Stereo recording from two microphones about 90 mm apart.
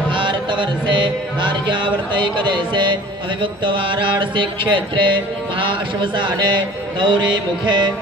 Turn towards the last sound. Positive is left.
turn(degrees=-55)  # may be behind; listen again after turning